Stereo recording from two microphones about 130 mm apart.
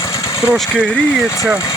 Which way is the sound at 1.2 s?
25° left (ahead or behind).